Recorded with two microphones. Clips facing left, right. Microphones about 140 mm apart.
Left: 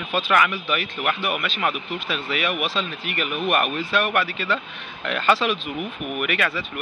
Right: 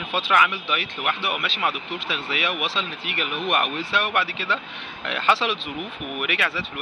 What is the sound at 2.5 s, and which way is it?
Speech, 25° right (ahead or behind).